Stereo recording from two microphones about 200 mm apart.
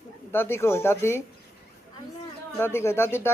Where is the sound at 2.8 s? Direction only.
10° left (ahead or behind).